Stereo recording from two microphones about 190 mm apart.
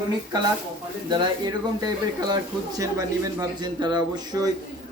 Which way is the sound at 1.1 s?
20° right (ahead or behind).